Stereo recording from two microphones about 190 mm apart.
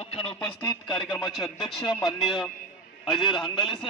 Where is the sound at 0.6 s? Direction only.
20° left (ahead or behind).